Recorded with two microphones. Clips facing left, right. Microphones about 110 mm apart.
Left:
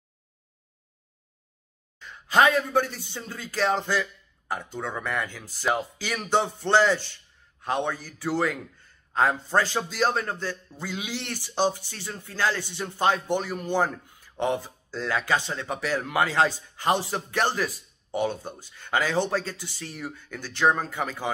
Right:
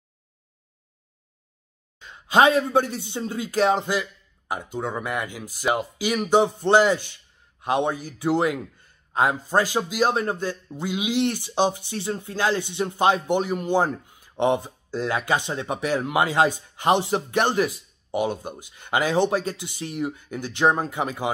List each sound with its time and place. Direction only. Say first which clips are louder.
2.0 s a man's voice: right 3 dB; 20° right (ahead or behind)